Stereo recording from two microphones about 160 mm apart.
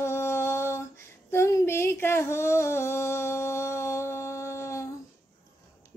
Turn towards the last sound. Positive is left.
turn(degrees=20)  # may be behind; listen again after turning